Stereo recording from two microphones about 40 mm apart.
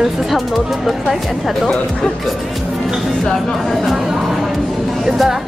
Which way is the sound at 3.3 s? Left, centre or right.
Centre.